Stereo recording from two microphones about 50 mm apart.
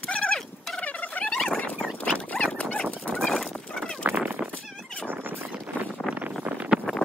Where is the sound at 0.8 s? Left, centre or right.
Left.